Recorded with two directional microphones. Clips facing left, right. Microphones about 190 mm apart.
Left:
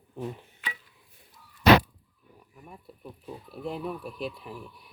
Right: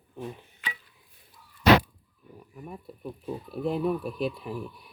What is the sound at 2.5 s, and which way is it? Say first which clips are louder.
Speech: right 6 dB; 20° right (ahead or behind).